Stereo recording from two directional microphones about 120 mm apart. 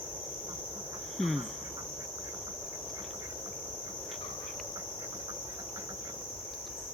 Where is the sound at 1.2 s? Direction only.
Centre (ahead or behind).